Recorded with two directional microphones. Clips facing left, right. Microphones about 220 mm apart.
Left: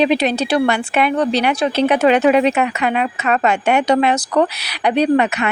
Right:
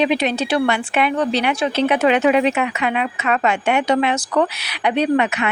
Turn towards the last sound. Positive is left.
turn(degrees=40)  # may be behind; listen again after turning